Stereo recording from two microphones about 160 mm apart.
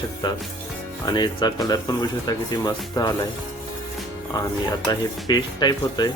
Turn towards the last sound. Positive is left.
turn(degrees=25)  # may be behind; listen again after turning